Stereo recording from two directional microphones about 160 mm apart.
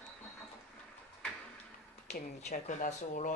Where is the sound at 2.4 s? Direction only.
50° left (ahead or behind).